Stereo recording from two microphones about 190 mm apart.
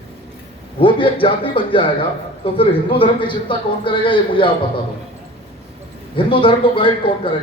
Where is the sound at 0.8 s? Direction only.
25° left (ahead or behind).